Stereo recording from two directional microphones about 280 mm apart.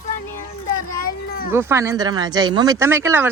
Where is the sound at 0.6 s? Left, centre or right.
Left.